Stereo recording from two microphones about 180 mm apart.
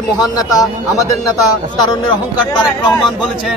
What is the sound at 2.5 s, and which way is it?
Speech, 25° left (ahead or behind).